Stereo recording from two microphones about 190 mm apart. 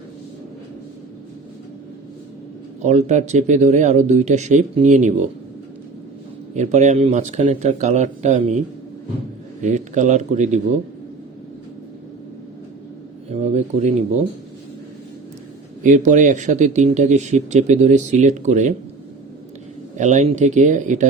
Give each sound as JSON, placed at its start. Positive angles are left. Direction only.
{"t": 2.8, "sound": "speech", "side_deg": -35}
{"t": 6.5, "sound": "speech", "side_deg": -35}
{"t": 13.3, "sound": "speech", "side_deg": -35}
{"t": 15.8, "sound": "speech", "side_deg": -40}
{"t": 20.0, "sound": "speech", "side_deg": -40}